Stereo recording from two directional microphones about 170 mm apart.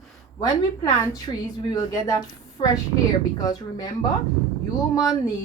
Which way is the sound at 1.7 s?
20° left (ahead or behind).